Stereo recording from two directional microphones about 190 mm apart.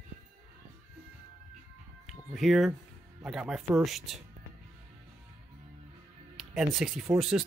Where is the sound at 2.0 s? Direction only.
Centre (ahead or behind).